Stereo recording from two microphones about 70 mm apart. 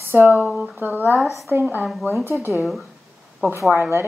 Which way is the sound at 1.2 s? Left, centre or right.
Centre.